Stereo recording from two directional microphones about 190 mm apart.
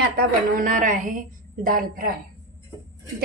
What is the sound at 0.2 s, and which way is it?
A woman's voice, 45° right (ahead or behind).